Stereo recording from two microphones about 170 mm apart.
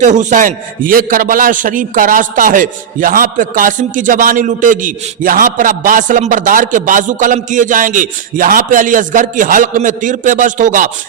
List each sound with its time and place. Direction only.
0.0 s a man's voice: 45° right (ahead or behind)